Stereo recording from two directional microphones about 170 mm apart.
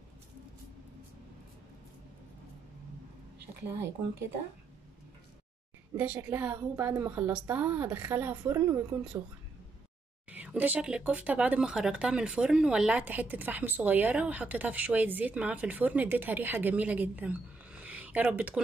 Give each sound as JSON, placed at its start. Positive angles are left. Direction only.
{"t": 5.9, "sound": "a woman's voice", "side_deg": -10}
{"t": 10.3, "sound": "speech", "side_deg": -10}